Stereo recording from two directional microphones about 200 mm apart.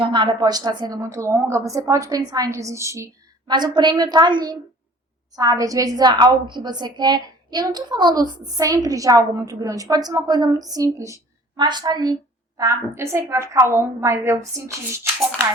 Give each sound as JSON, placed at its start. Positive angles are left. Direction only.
{"t": 0.0, "sound": "a woman's voice", "side_deg": -25}